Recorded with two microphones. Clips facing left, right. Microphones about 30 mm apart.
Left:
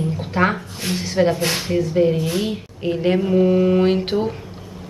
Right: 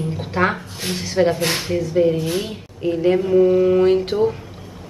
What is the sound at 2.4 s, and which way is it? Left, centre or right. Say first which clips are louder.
Speech: left 1 dB; centre.